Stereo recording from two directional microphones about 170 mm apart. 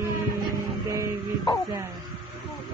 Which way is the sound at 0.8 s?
20° right (ahead or behind).